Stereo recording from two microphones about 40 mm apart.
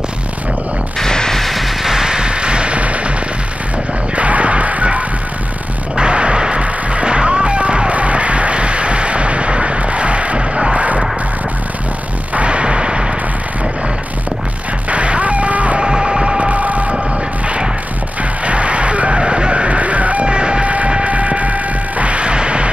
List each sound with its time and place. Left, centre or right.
1.0 s a sound: centre
1.4 s music: centre; by 3.0 s right
4.1 s music: right
5.9 s music: right
12.4 s a sound: right
14.9 s music: right
15.8 s a sound: centre; by 16.9 s right
18.4 s music: right
20.2 s music: right
20.6 s mains hum: right
20.9 s music: right